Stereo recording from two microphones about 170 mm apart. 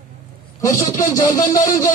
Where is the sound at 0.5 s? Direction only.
20° left (ahead or behind).